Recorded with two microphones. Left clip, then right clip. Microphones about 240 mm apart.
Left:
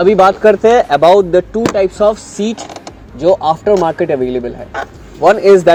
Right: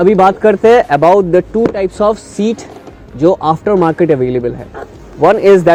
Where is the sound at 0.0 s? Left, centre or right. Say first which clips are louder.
Even; right.